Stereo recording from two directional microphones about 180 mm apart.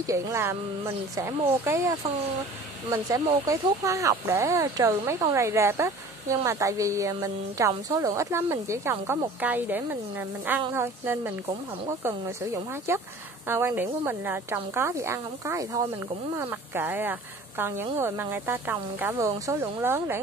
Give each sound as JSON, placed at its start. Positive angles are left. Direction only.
{"t": 0.0, "sound": "speech", "side_deg": -15}